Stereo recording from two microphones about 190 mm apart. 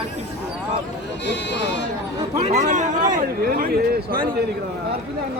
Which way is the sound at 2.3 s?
35° right (ahead or behind).